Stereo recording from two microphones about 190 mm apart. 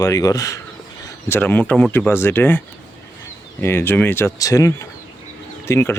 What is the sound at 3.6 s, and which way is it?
Speech, 10° left (ahead or behind).